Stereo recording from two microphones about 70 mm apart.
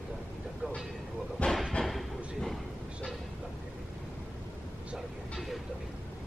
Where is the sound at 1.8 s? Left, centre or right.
Centre.